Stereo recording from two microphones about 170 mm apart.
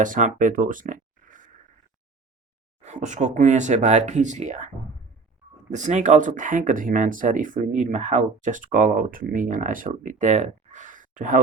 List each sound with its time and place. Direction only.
0.0 s speech: 50° right (ahead or behind)
2.8 s speech: 45° right (ahead or behind)
5.7 s speech: 45° right (ahead or behind)